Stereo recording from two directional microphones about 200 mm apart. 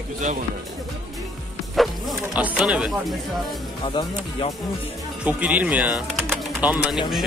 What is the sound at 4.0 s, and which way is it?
Speech, 25° left (ahead or behind).